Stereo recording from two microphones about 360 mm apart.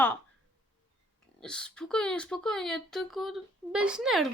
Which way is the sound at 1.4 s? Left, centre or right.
Centre.